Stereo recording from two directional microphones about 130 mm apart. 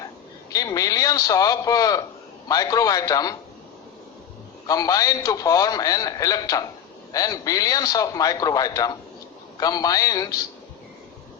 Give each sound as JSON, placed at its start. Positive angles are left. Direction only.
{"t": 0.5, "sound": "a man's voice", "side_deg": 30}
{"t": 4.6, "sound": "a man's voice", "side_deg": 30}